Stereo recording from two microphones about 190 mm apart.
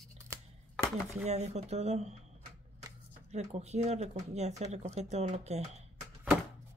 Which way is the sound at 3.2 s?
35° right (ahead or behind).